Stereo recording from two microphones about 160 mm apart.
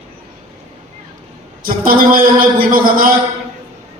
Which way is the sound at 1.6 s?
65° right (ahead or behind).